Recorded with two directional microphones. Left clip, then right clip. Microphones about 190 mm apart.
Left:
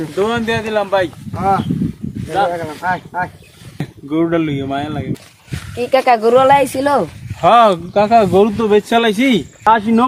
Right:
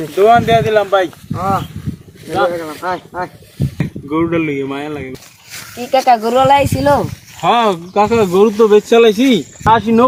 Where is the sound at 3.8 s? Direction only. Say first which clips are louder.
Even; 20° left (ahead or behind).